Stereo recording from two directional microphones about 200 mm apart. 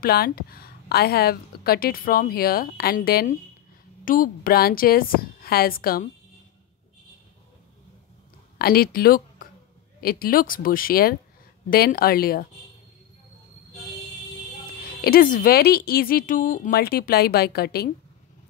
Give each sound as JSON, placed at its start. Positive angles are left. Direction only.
{"t": 0.0, "sound": "a woman's voice", "side_deg": 50}
{"t": 8.5, "sound": "a woman's voice", "side_deg": 50}
{"t": 14.8, "sound": "a woman's voice", "side_deg": 50}